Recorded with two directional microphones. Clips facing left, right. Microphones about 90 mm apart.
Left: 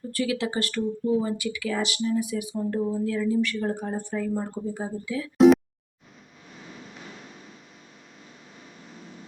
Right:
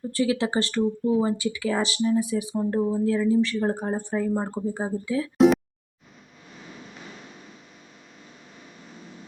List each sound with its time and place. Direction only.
0.1 s speech: 30° right (ahead or behind)